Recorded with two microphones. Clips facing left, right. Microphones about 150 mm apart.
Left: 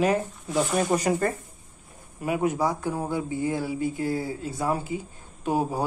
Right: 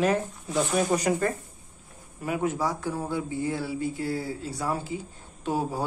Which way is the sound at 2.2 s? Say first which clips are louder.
Left 3 dB; 15° left (ahead or behind).